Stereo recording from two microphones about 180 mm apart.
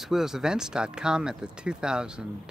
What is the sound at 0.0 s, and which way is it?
Speech, centre (ahead or behind).